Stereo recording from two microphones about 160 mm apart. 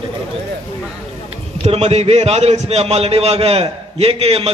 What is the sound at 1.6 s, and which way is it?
A man's voice, 40° right (ahead or behind).